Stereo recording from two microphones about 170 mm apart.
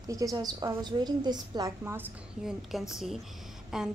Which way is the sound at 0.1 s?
20° right (ahead or behind).